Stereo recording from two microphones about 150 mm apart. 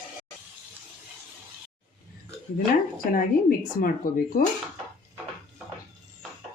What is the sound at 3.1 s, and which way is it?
Speech, 70° left (ahead or behind).